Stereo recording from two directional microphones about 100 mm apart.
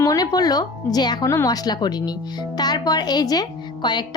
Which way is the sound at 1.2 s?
35° left (ahead or behind).